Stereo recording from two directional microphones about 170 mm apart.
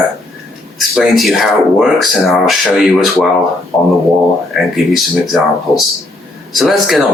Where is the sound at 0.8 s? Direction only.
Centre (ahead or behind).